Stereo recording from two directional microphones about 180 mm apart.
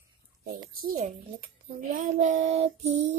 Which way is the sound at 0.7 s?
55° right (ahead or behind).